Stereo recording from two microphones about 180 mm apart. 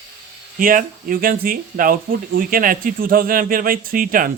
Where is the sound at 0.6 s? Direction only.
50° right (ahead or behind).